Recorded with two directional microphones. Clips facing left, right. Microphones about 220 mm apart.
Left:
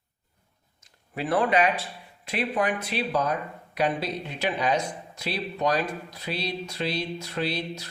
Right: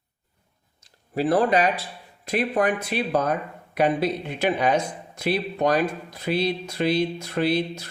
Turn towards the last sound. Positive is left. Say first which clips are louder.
# right 6 dB
turn(degrees=-50)  # may be behind; listen again after turning